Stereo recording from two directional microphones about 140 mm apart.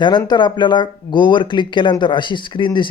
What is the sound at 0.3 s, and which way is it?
Speech, 30° left (ahead or behind).